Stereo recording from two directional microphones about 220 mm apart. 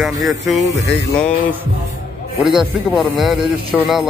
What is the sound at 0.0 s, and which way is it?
Speech, centre (ahead or behind).